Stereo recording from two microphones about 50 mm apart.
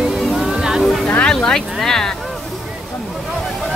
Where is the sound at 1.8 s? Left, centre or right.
Centre.